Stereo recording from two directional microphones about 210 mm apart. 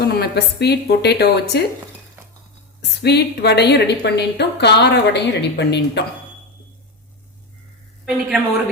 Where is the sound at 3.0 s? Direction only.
50° left (ahead or behind).